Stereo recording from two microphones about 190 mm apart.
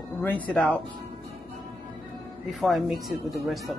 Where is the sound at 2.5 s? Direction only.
Centre (ahead or behind).